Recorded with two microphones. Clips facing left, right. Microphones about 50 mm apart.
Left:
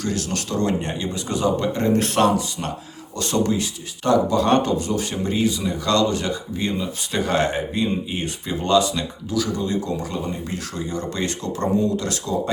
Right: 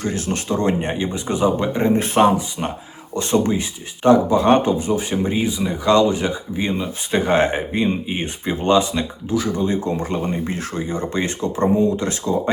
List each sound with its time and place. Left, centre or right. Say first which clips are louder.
0.0 s speech: right 2 dB; right